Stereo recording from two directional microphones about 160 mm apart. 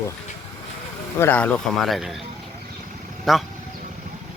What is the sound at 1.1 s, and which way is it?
Speech, 15° left (ahead or behind).